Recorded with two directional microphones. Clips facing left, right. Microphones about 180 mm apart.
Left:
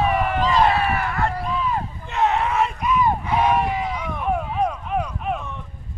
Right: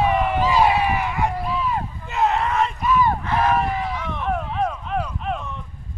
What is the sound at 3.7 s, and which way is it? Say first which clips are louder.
Run: even; 10° left (ahead or behind).